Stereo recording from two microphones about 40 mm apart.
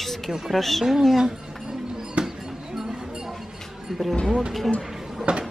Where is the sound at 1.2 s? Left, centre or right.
Centre.